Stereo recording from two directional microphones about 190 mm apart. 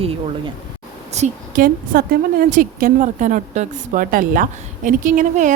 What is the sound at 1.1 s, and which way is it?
A woman's voice, 40° right (ahead or behind).